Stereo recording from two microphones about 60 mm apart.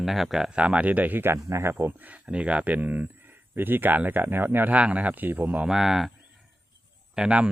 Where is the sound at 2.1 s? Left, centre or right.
Right.